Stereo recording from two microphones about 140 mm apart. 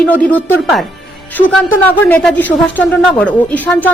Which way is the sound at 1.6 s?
15° left (ahead or behind).